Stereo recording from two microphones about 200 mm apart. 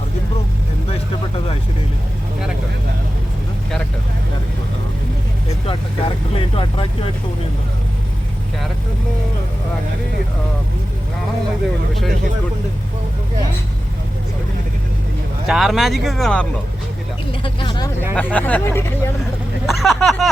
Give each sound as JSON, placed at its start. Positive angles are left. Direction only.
{"t": 6.3, "sound": "vehicle", "side_deg": 25}
{"t": 15.4, "sound": "speech", "side_deg": 0}
{"t": 17.4, "sound": "vehicle", "side_deg": 25}
{"t": 18.1, "sound": "speech", "side_deg": 5}
{"t": 19.6, "sound": "speech", "side_deg": 0}